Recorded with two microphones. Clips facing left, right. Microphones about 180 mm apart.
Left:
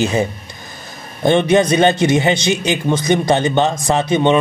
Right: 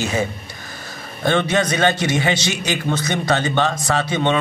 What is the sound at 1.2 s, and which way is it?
A man's voice, 20° left (ahead or behind).